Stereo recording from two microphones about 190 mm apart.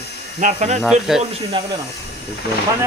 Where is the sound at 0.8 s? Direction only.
Centre (ahead or behind).